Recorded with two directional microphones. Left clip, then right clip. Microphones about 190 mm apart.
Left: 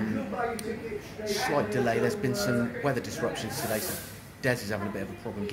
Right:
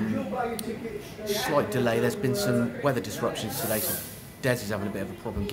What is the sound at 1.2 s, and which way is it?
Speech, 10° right (ahead or behind).